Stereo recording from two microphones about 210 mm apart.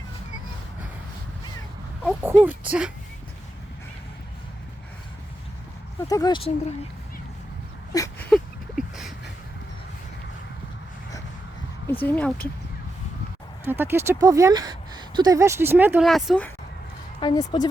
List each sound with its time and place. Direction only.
2.0 s speech: 10° right (ahead or behind)
6.1 s speech: 15° left (ahead or behind)
7.9 s speech: 15° left (ahead or behind)
8.3 s a sound: centre (ahead or behind)
11.9 s speech: 10° left (ahead or behind)
13.7 s speech: 10° right (ahead or behind)
17.2 s speech: 20° left (ahead or behind)